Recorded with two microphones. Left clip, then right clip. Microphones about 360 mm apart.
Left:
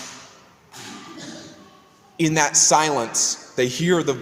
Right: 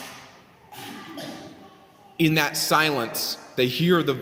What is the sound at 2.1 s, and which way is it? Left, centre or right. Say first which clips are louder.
A man's voice: left 3 dB; centre.